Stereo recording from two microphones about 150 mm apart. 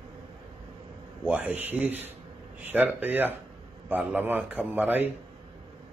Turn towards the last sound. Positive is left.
turn(degrees=-10)  # may be behind; listen again after turning